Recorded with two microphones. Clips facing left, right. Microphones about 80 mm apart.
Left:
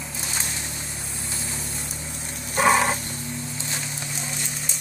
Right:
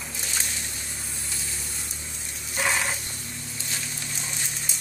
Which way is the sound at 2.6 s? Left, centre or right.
Left.